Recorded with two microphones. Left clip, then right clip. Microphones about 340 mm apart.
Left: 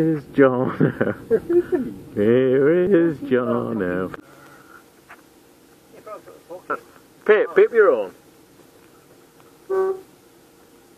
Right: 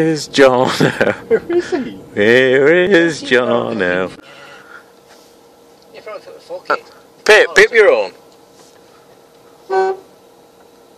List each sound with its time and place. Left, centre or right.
0.0 s speech: centre
7.2 s speech: centre